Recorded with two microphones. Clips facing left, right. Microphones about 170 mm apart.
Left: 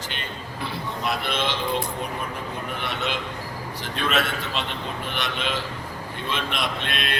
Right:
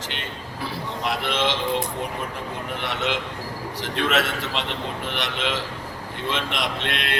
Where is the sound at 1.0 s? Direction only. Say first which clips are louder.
Right 2 dB; 90° right.